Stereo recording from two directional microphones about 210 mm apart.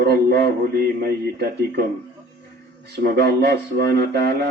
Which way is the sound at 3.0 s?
50° right (ahead or behind).